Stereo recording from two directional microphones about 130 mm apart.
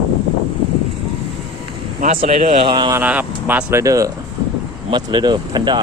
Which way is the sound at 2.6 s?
35° right (ahead or behind).